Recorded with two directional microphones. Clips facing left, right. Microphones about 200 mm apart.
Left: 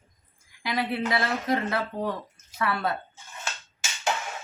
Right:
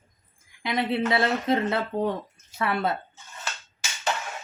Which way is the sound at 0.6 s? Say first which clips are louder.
Right 3 dB; 25° right (ahead or behind).